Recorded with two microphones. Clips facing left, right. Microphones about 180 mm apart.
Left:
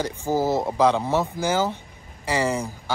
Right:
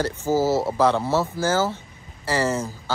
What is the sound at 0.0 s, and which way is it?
Speech, 15° left (ahead or behind).